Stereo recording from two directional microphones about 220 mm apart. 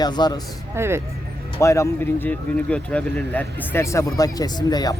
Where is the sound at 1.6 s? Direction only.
15° left (ahead or behind).